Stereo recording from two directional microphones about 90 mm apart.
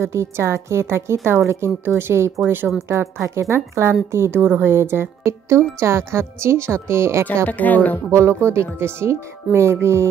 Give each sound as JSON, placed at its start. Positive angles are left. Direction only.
{"t": 0.0, "sound": "a woman's voice", "side_deg": -30}
{"t": 7.4, "sound": "a woman's voice", "side_deg": 20}
{"t": 8.1, "sound": "a woman's voice", "side_deg": -30}